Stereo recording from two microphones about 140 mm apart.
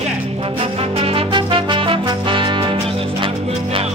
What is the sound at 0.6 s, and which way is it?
Music, 40° right (ahead or behind).